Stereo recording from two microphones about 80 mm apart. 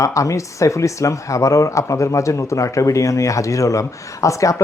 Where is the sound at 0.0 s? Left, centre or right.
Left.